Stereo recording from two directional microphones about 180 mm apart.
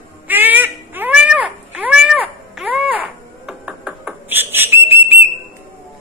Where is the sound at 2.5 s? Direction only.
5° right (ahead or behind).